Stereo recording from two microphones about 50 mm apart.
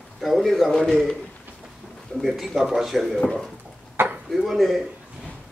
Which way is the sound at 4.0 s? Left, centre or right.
Right.